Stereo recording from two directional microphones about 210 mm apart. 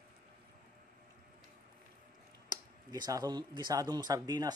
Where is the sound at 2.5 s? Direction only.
20° right (ahead or behind).